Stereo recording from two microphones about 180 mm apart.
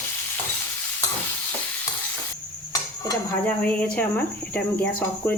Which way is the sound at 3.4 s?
5° left (ahead or behind).